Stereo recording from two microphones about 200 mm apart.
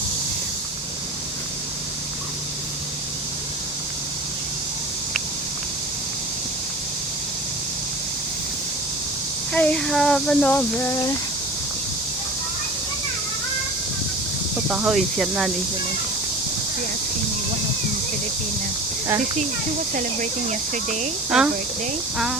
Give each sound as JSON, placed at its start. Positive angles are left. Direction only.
{"t": 9.5, "sound": "speech", "side_deg": 5}
{"t": 14.7, "sound": "speech", "side_deg": -5}
{"t": 19.9, "sound": "speech", "side_deg": -40}
{"t": 21.2, "sound": "speech", "side_deg": -5}